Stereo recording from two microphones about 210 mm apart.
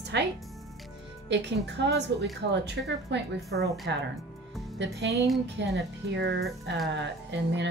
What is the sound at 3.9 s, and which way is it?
A woman's voice, 55° right (ahead or behind).